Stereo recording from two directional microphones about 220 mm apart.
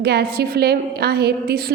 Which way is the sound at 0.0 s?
45° right (ahead or behind).